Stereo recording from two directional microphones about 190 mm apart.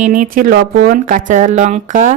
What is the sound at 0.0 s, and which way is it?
Speech, 45° right (ahead or behind).